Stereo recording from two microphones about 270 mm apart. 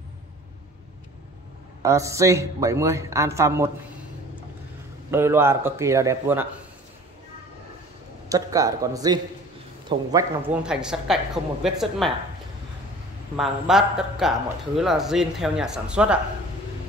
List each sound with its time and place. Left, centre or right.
1.8 s speech: centre
5.1 s speech: centre
8.3 s speech: centre
10.5 s speech: centre
13.4 s speech: centre